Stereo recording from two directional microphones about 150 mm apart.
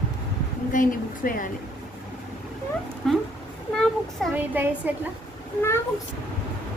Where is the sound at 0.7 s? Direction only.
65° left (ahead or behind).